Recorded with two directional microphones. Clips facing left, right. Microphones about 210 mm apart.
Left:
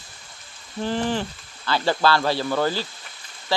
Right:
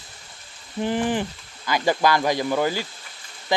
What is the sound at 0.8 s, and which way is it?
Speech, 15° right (ahead or behind).